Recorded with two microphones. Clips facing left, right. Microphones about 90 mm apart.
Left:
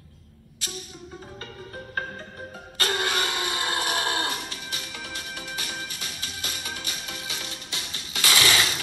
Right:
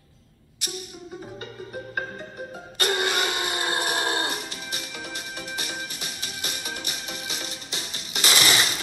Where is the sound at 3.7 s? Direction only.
30° right (ahead or behind).